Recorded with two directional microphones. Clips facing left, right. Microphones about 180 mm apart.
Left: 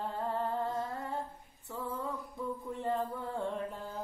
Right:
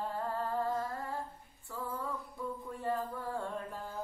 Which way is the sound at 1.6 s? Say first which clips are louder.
Left 2 dB; 25° left (ahead or behind).